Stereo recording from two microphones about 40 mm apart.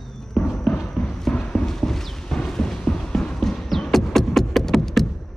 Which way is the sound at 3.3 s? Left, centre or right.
Centre.